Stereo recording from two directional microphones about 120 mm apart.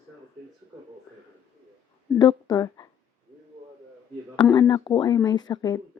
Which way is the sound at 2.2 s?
35° left (ahead or behind).